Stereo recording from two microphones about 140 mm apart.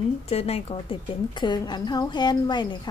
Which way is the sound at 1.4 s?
30° left (ahead or behind).